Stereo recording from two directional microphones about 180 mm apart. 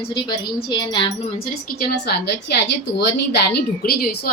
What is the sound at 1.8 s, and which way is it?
A woman's voice, 60° left (ahead or behind).